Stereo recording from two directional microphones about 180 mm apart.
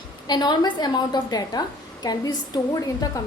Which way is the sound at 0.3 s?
25° left (ahead or behind).